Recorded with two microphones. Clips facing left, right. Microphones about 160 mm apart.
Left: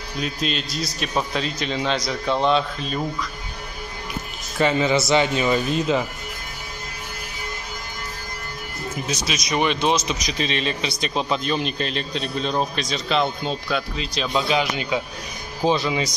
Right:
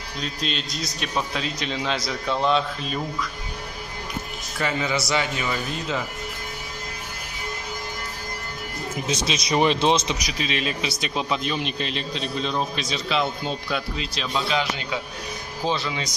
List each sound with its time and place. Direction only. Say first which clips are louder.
0.2 s speech: left 4 dB; 5° left (ahead or behind)
4.6 s speech: left 6 dB; 25° left (ahead or behind)
9.0 s speech: right 2 dB; 25° right (ahead or behind)
10.1 s speech: left 2 dB; 10° right (ahead or behind)
12.4 s a man's voice: left 3 dB; 45° left (ahead or behind)
12.7 s speech: left 2 dB; 5° right (ahead or behind)
14.5 s speech: left 4 dB; 15° left (ahead or behind)